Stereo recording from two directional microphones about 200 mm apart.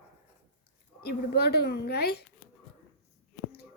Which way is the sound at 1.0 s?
50° left (ahead or behind).